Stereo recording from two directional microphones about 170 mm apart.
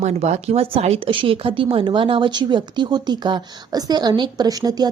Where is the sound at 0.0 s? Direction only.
40° right (ahead or behind).